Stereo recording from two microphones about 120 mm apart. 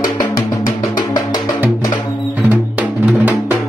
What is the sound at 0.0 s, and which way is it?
Music, 35° left (ahead or behind).